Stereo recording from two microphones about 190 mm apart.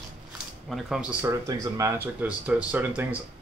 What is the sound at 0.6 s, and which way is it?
Speech, centre (ahead or behind).